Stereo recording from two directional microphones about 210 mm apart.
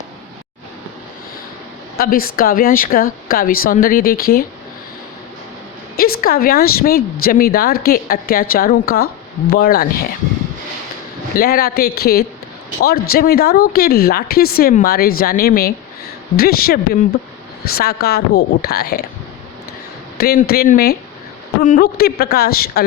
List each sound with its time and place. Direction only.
2.0 s speech: 45° left (ahead or behind)
6.0 s speech: 45° left (ahead or behind)
11.3 s speech: 45° left (ahead or behind)
20.1 s speech: 45° left (ahead or behind)